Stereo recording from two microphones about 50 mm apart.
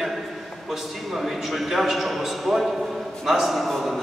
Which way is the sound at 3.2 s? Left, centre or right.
Centre.